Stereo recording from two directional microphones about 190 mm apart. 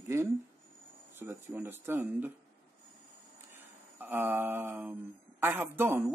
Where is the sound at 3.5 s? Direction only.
10° right (ahead or behind).